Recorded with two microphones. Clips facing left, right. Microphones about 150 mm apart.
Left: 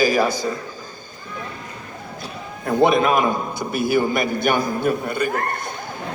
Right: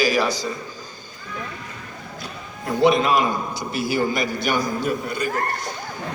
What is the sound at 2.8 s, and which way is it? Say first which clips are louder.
A man's voice: left 1 dB; 50° left (ahead or behind).